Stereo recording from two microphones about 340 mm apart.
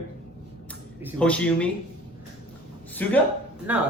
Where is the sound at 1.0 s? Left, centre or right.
Centre.